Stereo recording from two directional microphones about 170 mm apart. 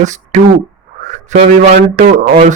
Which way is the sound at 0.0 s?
45° right (ahead or behind).